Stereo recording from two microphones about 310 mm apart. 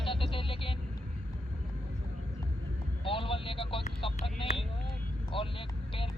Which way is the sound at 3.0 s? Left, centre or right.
Centre.